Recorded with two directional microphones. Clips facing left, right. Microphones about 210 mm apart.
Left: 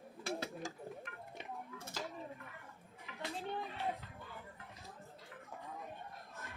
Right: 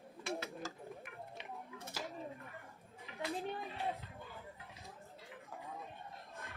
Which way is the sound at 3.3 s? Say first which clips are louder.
Even; 15° right (ahead or behind).